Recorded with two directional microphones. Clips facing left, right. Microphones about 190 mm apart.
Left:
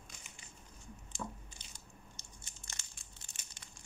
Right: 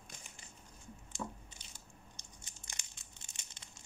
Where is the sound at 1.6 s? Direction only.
10° right (ahead or behind).